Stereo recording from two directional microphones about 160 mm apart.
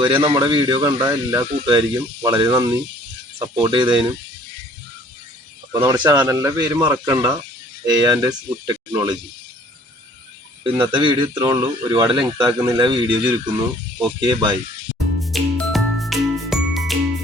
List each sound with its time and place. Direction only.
0.0 s speech: 30° right (ahead or behind)
5.7 s speech: 20° right (ahead or behind)
10.6 s speech: 30° right (ahead or behind)
15.2 s music: centre (ahead or behind)